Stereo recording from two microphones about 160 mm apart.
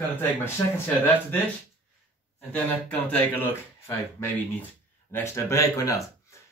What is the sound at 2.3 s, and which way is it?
A man's voice, 10° left (ahead or behind).